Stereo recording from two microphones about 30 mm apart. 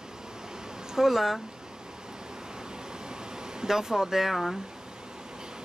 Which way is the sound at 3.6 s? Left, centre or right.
Centre.